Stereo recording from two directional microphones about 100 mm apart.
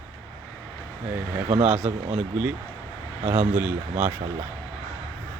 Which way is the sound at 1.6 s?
10° right (ahead or behind).